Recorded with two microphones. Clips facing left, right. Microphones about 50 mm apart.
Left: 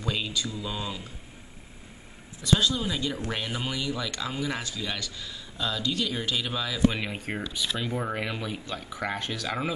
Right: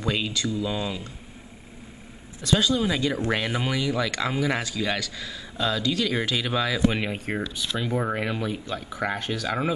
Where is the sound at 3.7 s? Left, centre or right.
Right.